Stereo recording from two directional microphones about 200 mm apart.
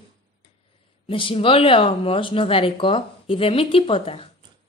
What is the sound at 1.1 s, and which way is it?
Speech, 25° left (ahead or behind).